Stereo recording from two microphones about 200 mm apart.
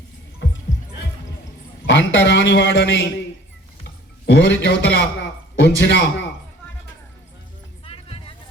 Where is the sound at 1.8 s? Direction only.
65° left (ahead or behind).